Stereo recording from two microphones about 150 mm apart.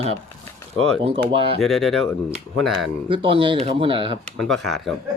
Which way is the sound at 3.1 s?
35° right (ahead or behind).